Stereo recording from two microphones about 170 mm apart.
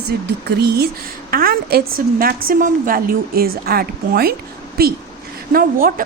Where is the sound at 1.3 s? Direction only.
60° right (ahead or behind).